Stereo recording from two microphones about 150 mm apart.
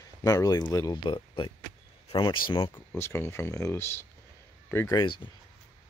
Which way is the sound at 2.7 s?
15° left (ahead or behind).